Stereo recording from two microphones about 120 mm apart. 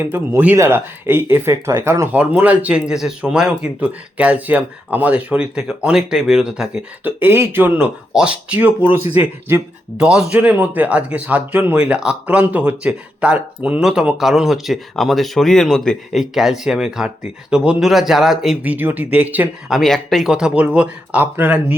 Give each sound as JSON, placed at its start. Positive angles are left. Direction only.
{"t": 0.0, "sound": "speech", "side_deg": -20}
{"t": 2.1, "sound": "a man's voice", "side_deg": -10}
{"t": 10.0, "sound": "a man's voice", "side_deg": -5}
{"t": 19.7, "sound": "a man's voice", "side_deg": 0}